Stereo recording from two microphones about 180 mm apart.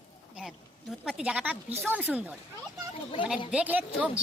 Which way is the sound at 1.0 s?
5° right (ahead or behind).